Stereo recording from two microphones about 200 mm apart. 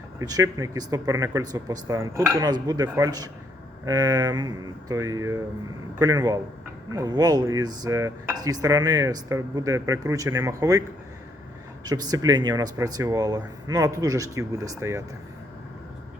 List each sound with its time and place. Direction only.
0.2 s speech: 15° right (ahead or behind)
11.9 s speech: 20° right (ahead or behind)